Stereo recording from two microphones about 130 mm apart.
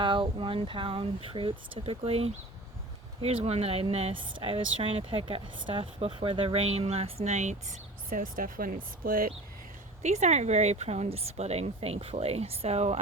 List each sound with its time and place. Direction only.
0.0 s speech: 40° right (ahead or behind); by 7.5 s 60° right (ahead or behind)
8.1 s speech: 90° right
10.0 s speech: 60° right (ahead or behind)